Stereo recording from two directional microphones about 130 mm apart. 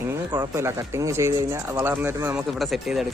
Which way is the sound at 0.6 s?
20° right (ahead or behind).